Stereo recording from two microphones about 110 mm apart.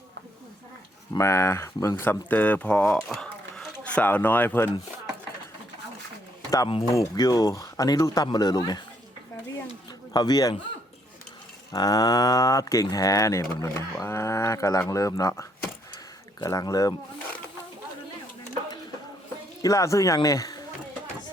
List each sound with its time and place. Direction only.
1.2 s speech: 25° left (ahead or behind)
3.1 s a sound: 5° left (ahead or behind)
6.9 s speech: 30° left (ahead or behind)
10.1 s speech: 35° left (ahead or behind)
11.7 s speech: 35° left (ahead or behind)
19.6 s speech: 30° left (ahead or behind)